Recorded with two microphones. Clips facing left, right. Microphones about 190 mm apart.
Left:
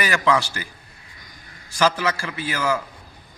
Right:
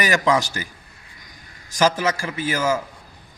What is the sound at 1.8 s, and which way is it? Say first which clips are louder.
Speech: right 1 dB; 15° right (ahead or behind).